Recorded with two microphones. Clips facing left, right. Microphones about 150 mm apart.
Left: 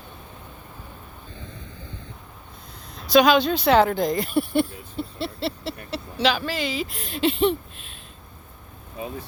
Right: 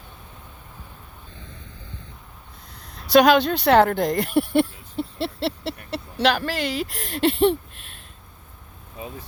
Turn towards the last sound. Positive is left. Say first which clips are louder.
# right 2 dB
turn(degrees=-65)  # may be behind; listen again after turning